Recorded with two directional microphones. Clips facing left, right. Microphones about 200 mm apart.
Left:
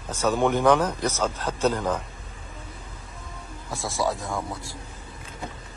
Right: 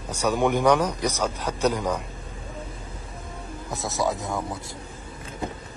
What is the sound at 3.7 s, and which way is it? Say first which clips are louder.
Speech: right 1 dB; 20° right (ahead or behind).